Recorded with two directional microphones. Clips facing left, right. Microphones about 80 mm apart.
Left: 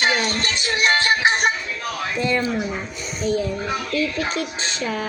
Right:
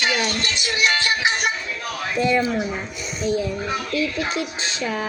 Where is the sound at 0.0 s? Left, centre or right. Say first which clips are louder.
Left 2 dB; left.